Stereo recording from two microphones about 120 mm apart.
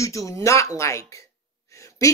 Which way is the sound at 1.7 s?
25° left (ahead or behind).